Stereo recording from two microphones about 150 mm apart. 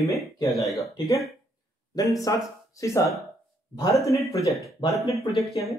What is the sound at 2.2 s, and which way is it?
Speech, 20° left (ahead or behind).